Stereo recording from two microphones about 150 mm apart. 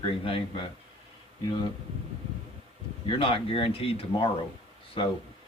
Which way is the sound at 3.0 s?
35° left (ahead or behind).